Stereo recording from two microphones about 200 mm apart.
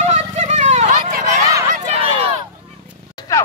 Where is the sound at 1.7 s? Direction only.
30° right (ahead or behind).